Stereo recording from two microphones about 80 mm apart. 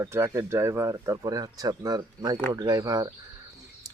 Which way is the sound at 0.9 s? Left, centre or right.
Right.